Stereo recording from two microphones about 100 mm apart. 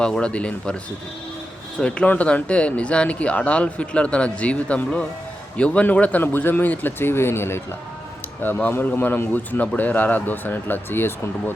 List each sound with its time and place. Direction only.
0.0 s speech: 10° left (ahead or behind)
1.8 s a man's voice: 10° left (ahead or behind)